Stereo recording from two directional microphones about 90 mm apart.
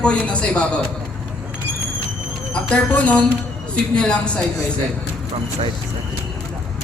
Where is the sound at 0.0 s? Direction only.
10° left (ahead or behind).